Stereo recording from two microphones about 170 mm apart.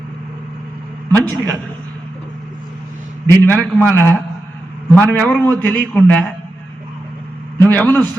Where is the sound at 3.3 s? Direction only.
10° left (ahead or behind).